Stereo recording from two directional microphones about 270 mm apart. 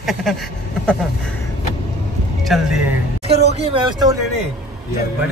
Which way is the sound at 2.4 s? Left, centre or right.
Centre.